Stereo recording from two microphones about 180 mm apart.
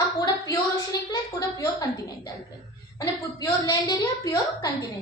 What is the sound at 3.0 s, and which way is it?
A woman's voice, 20° left (ahead or behind).